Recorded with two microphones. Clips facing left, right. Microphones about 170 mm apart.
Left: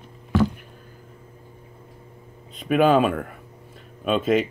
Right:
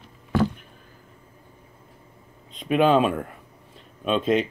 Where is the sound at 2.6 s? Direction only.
5° left (ahead or behind).